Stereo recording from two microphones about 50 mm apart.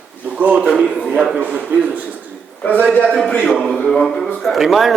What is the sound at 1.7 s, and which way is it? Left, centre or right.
Speech, right.